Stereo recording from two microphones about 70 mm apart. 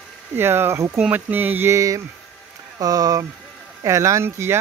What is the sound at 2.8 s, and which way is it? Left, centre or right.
Speech, right.